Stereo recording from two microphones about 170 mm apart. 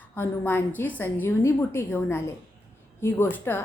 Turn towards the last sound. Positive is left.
turn(degrees=15)  # may be behind; listen again after turning